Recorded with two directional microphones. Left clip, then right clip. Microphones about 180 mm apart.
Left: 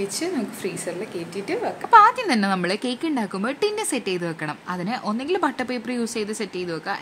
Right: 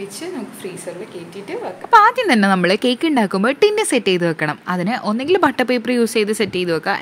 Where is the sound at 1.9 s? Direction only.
35° right (ahead or behind).